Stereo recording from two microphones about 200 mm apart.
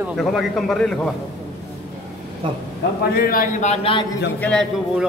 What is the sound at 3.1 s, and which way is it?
Speech, 45° left (ahead or behind).